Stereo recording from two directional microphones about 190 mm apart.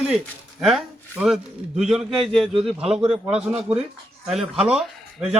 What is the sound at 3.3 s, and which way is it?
Speech, 5° right (ahead or behind).